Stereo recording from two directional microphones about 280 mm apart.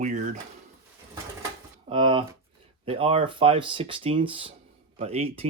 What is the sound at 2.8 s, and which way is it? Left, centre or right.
Speech, centre.